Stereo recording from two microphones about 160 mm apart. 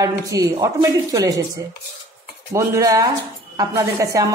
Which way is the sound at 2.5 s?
20° right (ahead or behind).